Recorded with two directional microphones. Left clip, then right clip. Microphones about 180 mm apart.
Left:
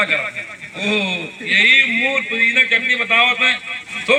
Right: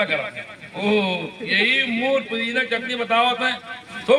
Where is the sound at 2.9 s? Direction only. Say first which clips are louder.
Left 6 dB; 15° left (ahead or behind).